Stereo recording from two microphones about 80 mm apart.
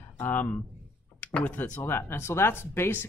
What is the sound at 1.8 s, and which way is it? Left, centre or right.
Speech, left.